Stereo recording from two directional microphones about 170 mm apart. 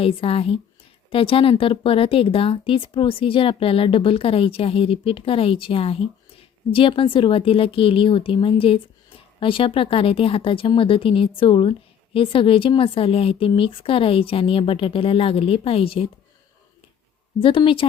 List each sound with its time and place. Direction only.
0.0 s speech: 35° left (ahead or behind)
17.4 s speech: 30° left (ahead or behind)